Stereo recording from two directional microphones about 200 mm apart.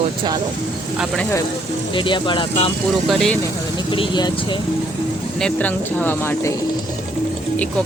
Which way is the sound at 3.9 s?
25° left (ahead or behind).